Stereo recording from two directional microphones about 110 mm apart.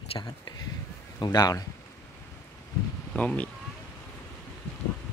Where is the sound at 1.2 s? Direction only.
35° left (ahead or behind).